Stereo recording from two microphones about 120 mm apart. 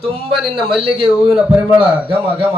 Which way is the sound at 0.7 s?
50° right (ahead or behind).